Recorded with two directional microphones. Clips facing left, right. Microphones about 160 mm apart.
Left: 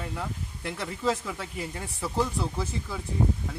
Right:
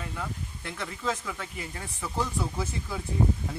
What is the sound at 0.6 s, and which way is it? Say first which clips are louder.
Speech: left 4 dB; 5° left (ahead or behind).